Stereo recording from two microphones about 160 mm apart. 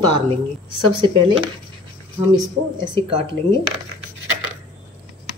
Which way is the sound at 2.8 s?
30° right (ahead or behind).